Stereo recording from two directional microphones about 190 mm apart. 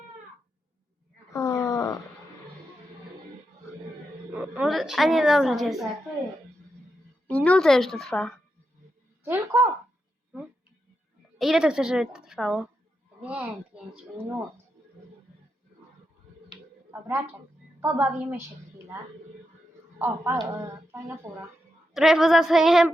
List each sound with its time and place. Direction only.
1.3 s wail: 15° left (ahead or behind)
4.3 s a woman's voice: 10° right (ahead or behind)
7.3 s speech: 5° left (ahead or behind)
9.2 s a woman's voice: 10° right (ahead or behind)
11.3 s a woman's voice: centre (ahead or behind)
17.7 s a woman's voice: 10° right (ahead or behind)
20.0 s speech: 10° right (ahead or behind)
21.9 s a woman's voice: centre (ahead or behind)